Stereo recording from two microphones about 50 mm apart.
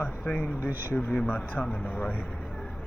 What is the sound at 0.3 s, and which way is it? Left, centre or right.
Speech, left.